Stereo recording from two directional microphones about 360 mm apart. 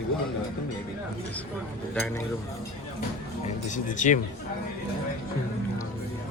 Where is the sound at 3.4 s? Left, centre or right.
Left.